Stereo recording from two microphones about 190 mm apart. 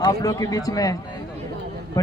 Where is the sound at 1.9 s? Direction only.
20° left (ahead or behind).